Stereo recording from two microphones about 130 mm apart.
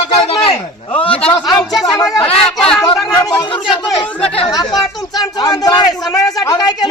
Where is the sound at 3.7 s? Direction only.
45° left (ahead or behind).